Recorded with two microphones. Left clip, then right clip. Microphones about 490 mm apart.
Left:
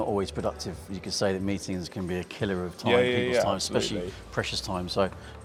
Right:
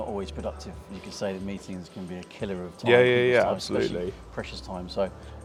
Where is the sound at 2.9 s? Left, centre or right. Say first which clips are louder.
Right 4 dB; right.